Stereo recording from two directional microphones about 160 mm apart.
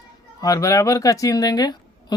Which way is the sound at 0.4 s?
20° left (ahead or behind).